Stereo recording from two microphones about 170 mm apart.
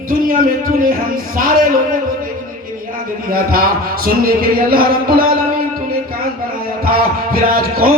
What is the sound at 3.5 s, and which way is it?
Music, 60° right (ahead or behind).